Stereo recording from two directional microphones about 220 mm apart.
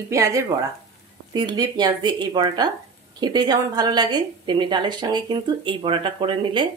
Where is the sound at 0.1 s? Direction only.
15° right (ahead or behind).